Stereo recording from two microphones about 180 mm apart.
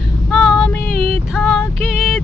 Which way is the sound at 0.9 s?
55° left (ahead or behind).